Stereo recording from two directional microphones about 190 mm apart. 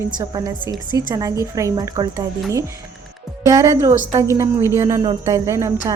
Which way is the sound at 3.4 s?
15° right (ahead or behind).